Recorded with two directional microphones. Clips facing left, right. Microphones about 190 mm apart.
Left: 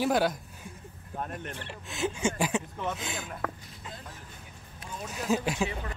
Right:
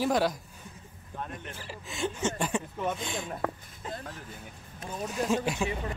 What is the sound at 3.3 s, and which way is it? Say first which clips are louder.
Speech: right 3 dB; 25° right (ahead or behind).